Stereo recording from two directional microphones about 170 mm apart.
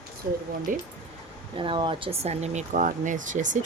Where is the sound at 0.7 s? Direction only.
50° right (ahead or behind).